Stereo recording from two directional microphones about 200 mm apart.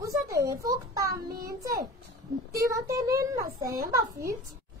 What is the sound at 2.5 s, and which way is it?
Speech, 15° right (ahead or behind).